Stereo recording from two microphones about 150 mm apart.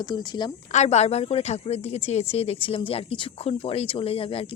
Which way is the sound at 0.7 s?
45° left (ahead or behind).